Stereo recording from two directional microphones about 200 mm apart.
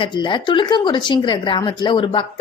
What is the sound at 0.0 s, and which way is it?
A woman's voice, 25° left (ahead or behind).